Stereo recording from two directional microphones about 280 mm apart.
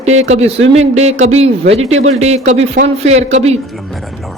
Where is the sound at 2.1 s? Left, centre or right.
Right.